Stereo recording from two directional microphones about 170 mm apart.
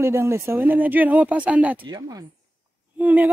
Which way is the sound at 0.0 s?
15° right (ahead or behind).